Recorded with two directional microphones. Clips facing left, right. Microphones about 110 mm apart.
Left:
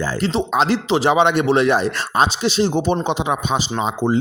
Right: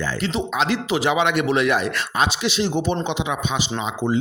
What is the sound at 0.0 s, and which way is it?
Speech, 35° left (ahead or behind).